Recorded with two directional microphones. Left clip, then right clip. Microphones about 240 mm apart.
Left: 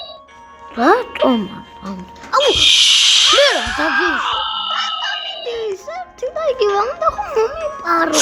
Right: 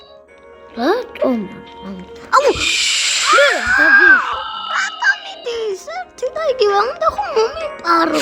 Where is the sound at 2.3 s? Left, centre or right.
Right.